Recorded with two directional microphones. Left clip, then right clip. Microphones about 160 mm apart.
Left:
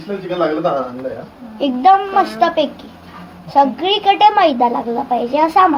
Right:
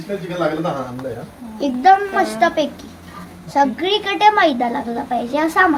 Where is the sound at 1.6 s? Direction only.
25° left (ahead or behind).